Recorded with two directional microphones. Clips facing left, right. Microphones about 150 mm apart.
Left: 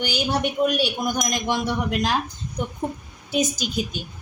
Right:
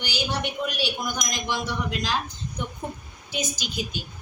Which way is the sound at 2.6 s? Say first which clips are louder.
Left 6 dB; 40° left (ahead or behind).